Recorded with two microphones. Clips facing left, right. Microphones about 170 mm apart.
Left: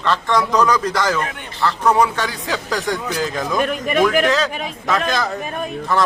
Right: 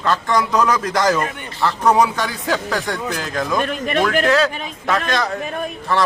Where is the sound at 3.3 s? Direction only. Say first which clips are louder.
Right 2 dB; 5° left (ahead or behind).